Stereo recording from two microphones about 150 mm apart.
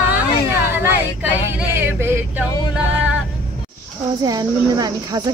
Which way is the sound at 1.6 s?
15° right (ahead or behind).